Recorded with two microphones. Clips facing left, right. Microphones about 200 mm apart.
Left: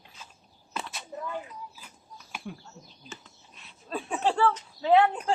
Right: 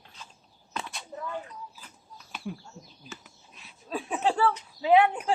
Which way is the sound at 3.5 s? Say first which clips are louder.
Right 1 dB; centre (ahead or behind).